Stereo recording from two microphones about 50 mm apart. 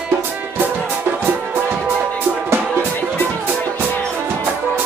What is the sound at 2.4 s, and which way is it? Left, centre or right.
Music, right.